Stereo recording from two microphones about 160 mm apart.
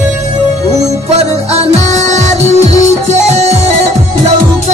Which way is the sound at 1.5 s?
45° right (ahead or behind).